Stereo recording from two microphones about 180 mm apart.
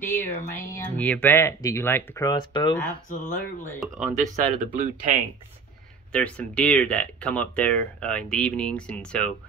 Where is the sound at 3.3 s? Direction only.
10° left (ahead or behind).